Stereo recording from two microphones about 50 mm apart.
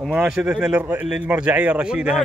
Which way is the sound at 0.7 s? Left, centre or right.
Right.